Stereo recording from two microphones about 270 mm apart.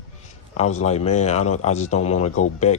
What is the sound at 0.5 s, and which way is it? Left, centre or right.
A man's voice, left.